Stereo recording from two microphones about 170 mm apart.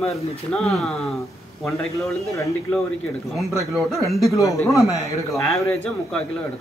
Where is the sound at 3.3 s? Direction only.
Centre (ahead or behind).